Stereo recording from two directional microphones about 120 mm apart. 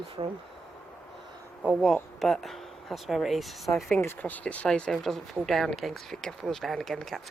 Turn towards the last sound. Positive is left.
turn(degrees=5)  # may be behind; listen again after turning